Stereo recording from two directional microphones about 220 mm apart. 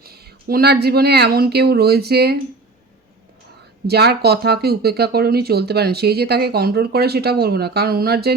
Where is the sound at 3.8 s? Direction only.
45° right (ahead or behind).